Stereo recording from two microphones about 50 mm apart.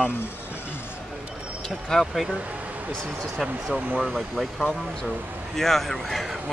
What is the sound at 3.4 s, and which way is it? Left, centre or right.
Speech, centre.